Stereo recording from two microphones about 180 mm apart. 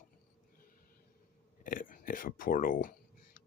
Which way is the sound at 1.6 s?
50° left (ahead or behind).